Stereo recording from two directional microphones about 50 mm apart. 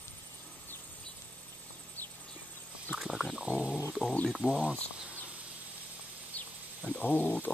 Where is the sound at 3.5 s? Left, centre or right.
Right.